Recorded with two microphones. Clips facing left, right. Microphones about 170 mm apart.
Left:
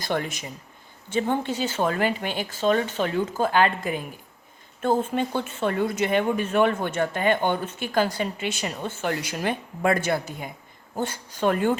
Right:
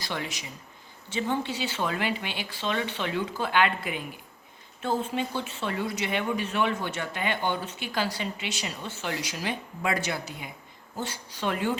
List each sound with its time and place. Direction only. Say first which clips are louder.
0.0 s speech: left 7 dB; 50° left (ahead or behind)